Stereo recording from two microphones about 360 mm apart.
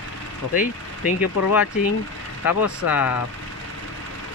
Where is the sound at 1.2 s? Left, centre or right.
Left.